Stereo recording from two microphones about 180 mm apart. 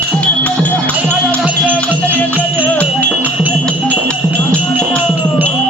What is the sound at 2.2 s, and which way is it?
Music, 10° left (ahead or behind).